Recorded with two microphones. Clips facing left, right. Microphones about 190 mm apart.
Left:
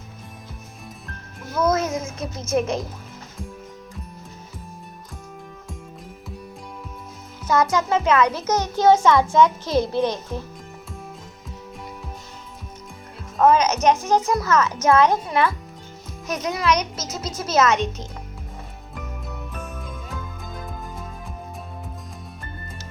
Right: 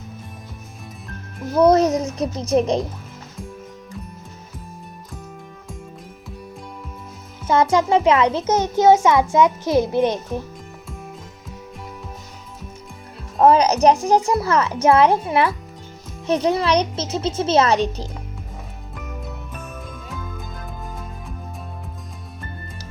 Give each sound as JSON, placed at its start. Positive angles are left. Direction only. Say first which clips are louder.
{"t": 1.5, "sound": "speech", "louder": "right 7 dB", "side_deg": -35}
{"t": 7.4, "sound": "a child's voice", "louder": "right 3 dB", "side_deg": -30}
{"t": 13.4, "sound": "a child's voice", "louder": "right 3 dB", "side_deg": -35}